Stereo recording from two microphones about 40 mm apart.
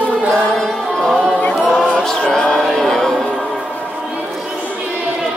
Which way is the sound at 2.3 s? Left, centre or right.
Centre.